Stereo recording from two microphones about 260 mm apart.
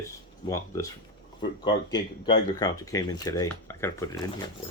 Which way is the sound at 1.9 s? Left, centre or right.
Centre.